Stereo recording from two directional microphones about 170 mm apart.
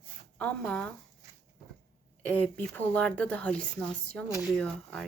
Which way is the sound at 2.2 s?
10° left (ahead or behind).